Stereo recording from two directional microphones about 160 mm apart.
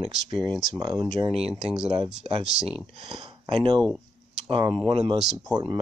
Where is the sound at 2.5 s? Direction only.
5° right (ahead or behind).